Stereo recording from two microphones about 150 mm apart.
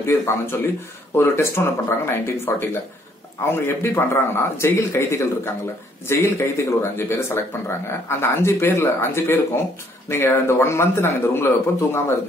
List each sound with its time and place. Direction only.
0.0 s speech: 15° left (ahead or behind)
3.5 s speech: 15° left (ahead or behind)